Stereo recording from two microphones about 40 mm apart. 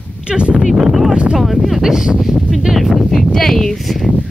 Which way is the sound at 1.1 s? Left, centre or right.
Right.